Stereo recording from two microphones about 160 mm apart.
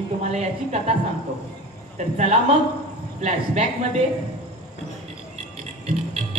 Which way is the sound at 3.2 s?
40° right (ahead or behind).